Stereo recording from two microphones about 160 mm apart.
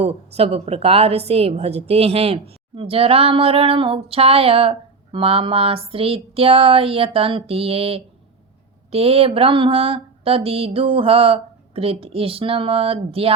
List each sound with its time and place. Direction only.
0.0 s a woman's voice: 40° right (ahead or behind)